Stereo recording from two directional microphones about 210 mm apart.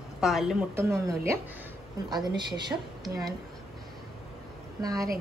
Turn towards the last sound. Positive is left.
turn(degrees=-15)  # may be behind; listen again after turning